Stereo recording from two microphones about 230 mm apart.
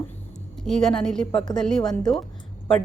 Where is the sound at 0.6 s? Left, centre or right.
Centre.